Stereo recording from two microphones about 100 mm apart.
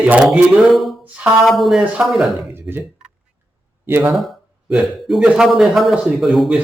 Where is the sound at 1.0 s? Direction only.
10° right (ahead or behind).